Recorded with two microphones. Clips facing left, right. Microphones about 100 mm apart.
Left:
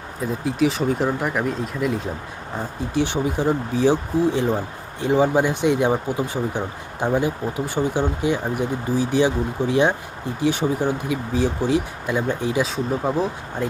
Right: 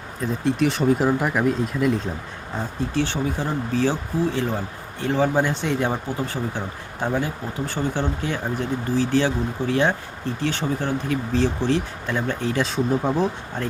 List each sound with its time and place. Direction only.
0.2 s speech: 5° left (ahead or behind)
2.9 s speech: 15° left (ahead or behind)
12.6 s speech: centre (ahead or behind)